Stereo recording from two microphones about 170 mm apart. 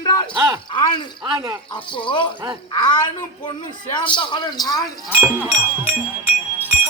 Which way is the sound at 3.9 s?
30° left (ahead or behind).